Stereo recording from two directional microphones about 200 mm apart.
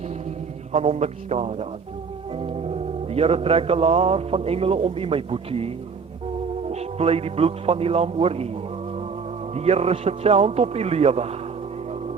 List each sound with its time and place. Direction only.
0.7 s a man's voice: 35° right (ahead or behind)
2.3 s music: 30° right (ahead or behind)
9.6 s a man's voice: 30° right (ahead or behind)